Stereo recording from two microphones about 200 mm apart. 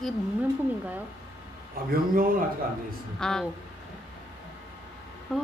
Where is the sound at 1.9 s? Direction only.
45° right (ahead or behind).